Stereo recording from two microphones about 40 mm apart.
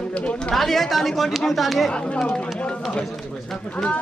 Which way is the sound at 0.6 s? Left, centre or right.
Centre.